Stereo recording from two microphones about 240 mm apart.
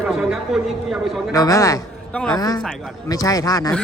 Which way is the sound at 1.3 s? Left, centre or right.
Centre.